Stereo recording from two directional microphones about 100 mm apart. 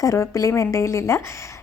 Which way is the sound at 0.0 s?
35° left (ahead or behind).